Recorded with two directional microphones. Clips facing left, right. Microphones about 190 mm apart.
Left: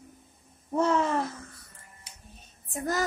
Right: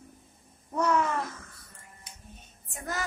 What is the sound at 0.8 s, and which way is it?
Speech, 30° left (ahead or behind).